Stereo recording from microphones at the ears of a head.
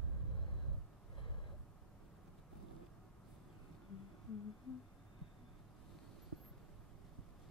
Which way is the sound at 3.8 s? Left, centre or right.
Left.